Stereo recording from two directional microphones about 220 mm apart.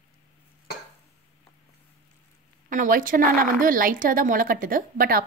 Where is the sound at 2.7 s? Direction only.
35° right (ahead or behind).